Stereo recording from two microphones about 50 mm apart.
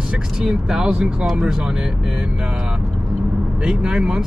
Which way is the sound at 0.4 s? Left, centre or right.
Centre.